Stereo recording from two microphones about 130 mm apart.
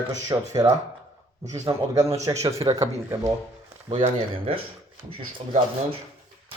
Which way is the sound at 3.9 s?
45° right (ahead or behind).